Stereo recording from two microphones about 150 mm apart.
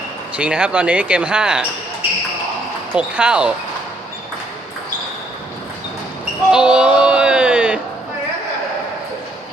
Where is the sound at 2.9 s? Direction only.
10° right (ahead or behind).